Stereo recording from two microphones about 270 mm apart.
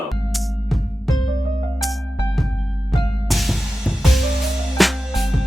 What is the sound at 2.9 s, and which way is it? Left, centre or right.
Music, centre.